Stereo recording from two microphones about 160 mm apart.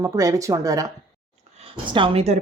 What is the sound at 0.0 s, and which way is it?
Speech, 20° right (ahead or behind).